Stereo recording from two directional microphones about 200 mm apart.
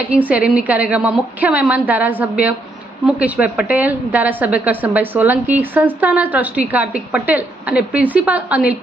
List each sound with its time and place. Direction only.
0.1 s a woman's voice: 5° right (ahead or behind)